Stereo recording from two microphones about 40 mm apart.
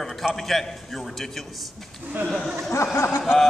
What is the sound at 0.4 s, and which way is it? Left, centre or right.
A man's voice, centre.